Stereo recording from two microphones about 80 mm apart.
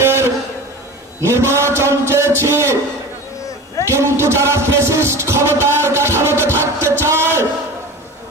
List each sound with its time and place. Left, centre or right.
0.0 s a sound: right
1.2 s music: right
3.8 s music: right